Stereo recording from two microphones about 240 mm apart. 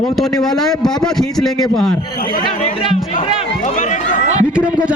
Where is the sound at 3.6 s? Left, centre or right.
Left.